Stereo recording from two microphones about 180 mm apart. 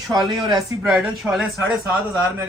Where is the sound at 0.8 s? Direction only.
5° right (ahead or behind).